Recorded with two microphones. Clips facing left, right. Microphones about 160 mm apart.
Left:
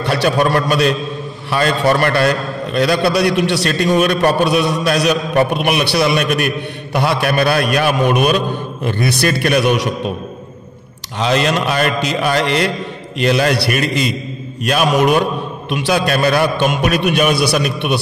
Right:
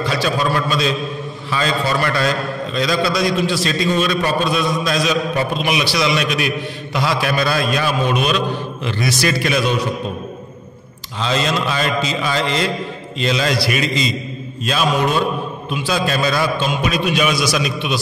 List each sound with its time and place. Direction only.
0.0 s a man's voice: 65° left (ahead or behind)
11.1 s a man's voice: 65° left (ahead or behind)
14.6 s mantra: 65° left (ahead or behind)
15.7 s a man's voice: 75° left (ahead or behind)